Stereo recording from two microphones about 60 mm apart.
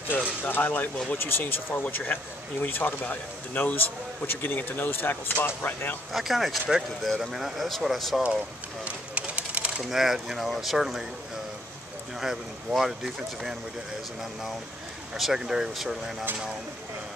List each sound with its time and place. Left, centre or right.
0.5 s a man's voice: left
6.1 s speech: centre
8.8 s a sound: right
9.8 s speech: centre
12.2 s speech: centre
15.1 s speech: centre